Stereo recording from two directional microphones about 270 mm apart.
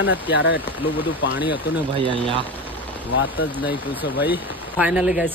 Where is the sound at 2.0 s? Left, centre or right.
Centre.